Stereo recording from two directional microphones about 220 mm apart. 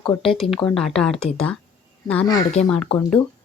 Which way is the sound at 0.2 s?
Centre (ahead or behind).